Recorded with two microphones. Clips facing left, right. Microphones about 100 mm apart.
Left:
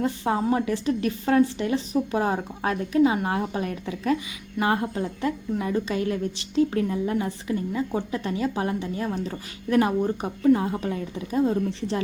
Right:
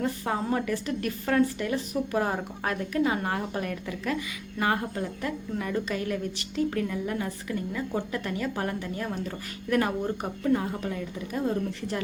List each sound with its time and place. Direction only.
0.0 s a woman's voice: 20° left (ahead or behind)